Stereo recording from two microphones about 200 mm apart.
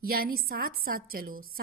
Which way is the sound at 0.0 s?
50° right (ahead or behind).